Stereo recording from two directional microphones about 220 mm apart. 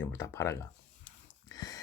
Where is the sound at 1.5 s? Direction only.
15° left (ahead or behind).